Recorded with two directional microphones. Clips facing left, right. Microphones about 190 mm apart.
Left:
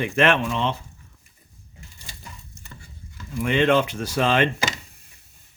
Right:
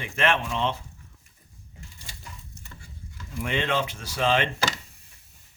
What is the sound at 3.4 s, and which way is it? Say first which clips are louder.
Speech: left 8 dB; 60° left (ahead or behind).